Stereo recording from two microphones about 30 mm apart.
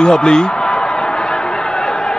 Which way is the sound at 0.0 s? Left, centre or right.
Left.